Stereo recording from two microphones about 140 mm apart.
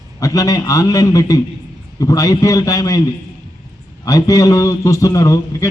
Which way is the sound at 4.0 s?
25° left (ahead or behind).